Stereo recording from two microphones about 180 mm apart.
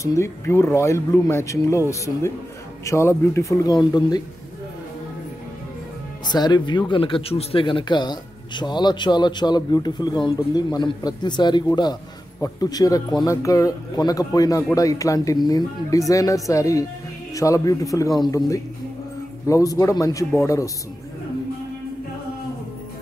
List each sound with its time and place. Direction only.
0.0 s speech: 15° left (ahead or behind)
6.3 s speech: 25° left (ahead or behind)